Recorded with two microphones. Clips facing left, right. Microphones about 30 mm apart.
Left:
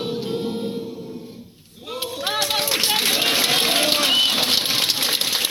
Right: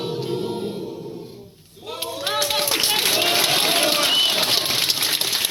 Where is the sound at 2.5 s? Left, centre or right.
Centre.